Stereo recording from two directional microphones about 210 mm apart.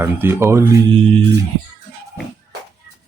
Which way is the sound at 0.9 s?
25° right (ahead or behind).